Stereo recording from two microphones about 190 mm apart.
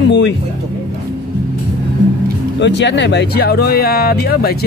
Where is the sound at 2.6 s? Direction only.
70° left (ahead or behind).